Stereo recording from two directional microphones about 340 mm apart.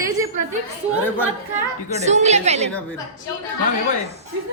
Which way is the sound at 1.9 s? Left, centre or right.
Centre.